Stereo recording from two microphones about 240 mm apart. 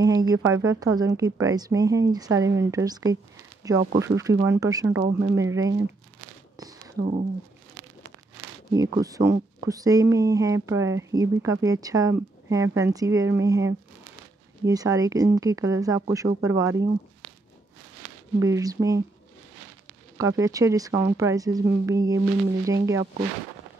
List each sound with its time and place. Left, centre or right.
0.0 s speech: centre
7.0 s speech: right
8.7 s speech: centre
18.4 s speech: centre
20.2 s speech: centre